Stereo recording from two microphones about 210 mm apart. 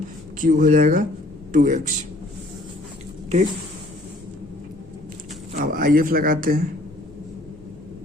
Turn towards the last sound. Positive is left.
turn(degrees=-45)  # may be behind; listen again after turning